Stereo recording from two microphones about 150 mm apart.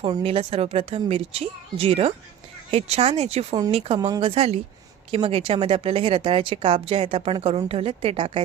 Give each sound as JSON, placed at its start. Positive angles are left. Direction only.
{"t": 0.0, "sound": "a woman's voice", "side_deg": -40}
{"t": 4.4, "sound": "a woman's voice", "side_deg": -40}